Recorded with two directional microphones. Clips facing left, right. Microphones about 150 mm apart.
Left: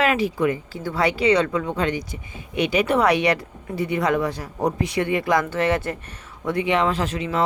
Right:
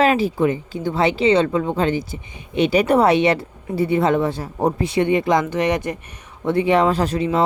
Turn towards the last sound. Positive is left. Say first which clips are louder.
# right 5 dB
turn(degrees=-35)  # may be behind; listen again after turning